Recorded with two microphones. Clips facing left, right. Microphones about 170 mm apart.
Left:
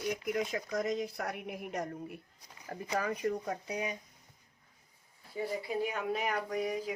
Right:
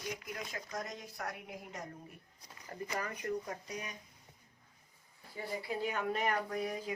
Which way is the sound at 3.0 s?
90° left.